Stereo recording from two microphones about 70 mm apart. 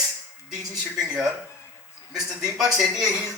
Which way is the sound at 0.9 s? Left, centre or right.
Centre.